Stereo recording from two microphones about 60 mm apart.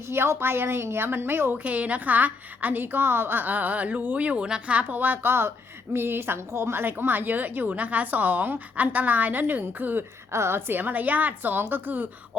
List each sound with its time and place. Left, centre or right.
0.1 s a woman's voice: right
1.5 s a woman's voice: right
10.3 s a woman's voice: right